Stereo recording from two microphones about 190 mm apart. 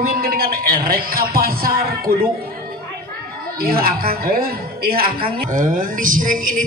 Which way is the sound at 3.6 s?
50° right (ahead or behind).